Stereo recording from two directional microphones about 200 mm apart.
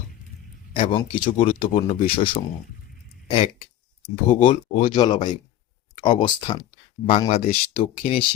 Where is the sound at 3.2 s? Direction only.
25° left (ahead or behind).